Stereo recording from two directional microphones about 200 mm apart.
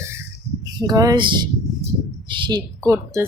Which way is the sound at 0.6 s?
20° right (ahead or behind).